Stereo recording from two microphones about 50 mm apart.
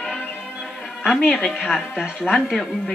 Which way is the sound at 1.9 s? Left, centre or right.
Centre.